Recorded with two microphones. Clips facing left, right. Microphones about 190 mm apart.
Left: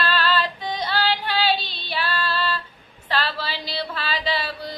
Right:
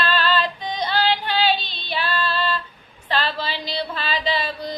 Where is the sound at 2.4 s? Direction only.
20° right (ahead or behind).